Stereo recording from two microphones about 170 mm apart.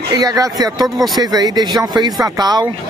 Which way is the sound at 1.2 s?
20° right (ahead or behind).